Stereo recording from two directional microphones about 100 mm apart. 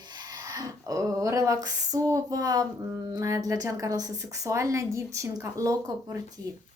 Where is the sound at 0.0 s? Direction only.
45° right (ahead or behind).